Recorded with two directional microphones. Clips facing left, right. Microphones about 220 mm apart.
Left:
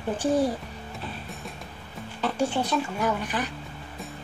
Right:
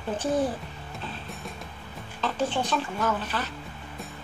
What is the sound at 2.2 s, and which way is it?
Speech, 10° left (ahead or behind).